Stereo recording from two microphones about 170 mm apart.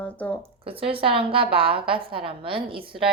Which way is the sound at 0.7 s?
35° right (ahead or behind).